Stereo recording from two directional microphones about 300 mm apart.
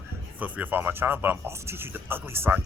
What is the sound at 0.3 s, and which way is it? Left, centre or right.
A man's voice, centre.